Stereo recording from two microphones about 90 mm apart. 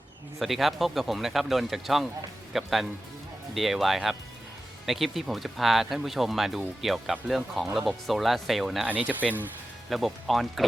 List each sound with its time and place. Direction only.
0.3 s speech: centre (ahead or behind)
8.9 s speech: 15° right (ahead or behind)
9.9 s speech: centre (ahead or behind)